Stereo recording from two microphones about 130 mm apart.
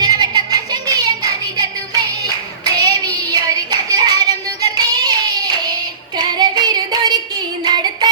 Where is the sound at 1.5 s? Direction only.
30° right (ahead or behind).